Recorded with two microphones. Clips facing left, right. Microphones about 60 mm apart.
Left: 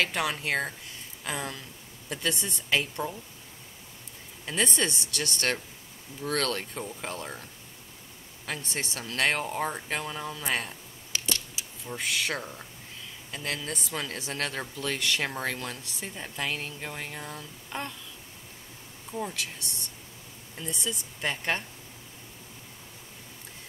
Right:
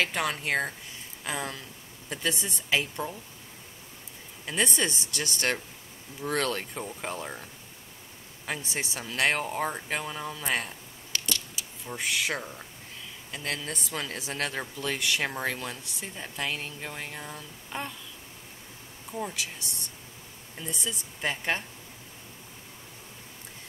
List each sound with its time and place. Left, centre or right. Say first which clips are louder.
0.0 s speech: even; centre
4.5 s speech: even; centre
8.5 s speech: right 1 dB; centre
11.1 s a sound: even; left
11.9 s speech: right 1 dB; centre
19.1 s speech: even; centre